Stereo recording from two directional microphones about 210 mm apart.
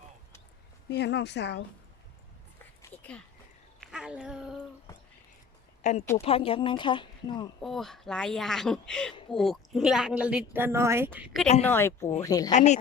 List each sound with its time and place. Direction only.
0.9 s a woman's voice: 55° left (ahead or behind)
2.8 s a sound: 5° left (ahead or behind)
5.8 s a woman's voice: 35° left (ahead or behind)
7.6 s a woman's voice: centre (ahead or behind)
11.6 s speech: 10° left (ahead or behind)
12.5 s speech: 35° left (ahead or behind)